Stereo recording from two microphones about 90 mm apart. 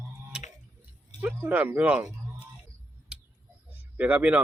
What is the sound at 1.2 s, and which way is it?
Speech, 20° right (ahead or behind).